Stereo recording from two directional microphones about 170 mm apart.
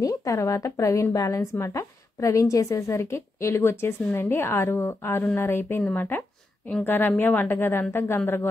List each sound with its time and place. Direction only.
0.0 s a woman's voice: 20° left (ahead or behind)